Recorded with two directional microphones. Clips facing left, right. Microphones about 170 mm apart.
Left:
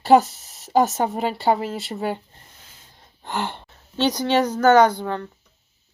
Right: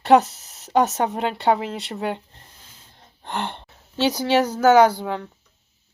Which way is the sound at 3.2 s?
5° left (ahead or behind).